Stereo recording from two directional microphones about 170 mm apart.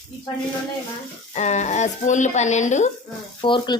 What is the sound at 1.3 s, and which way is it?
Speech, 45° left (ahead or behind).